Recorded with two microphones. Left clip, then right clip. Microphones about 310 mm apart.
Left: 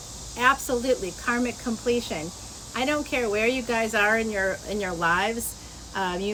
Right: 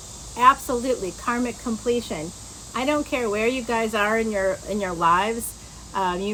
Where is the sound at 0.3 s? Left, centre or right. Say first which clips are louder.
Right 5 dB; centre.